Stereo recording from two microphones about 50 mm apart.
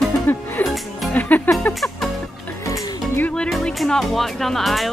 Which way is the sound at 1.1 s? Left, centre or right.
Left.